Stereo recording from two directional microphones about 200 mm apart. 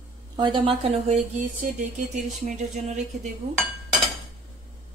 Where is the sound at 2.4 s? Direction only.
35° right (ahead or behind).